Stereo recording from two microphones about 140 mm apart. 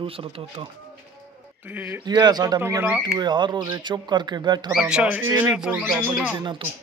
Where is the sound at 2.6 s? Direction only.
15° right (ahead or behind).